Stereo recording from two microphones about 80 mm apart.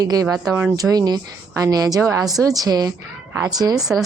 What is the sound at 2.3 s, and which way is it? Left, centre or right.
A woman's voice, right.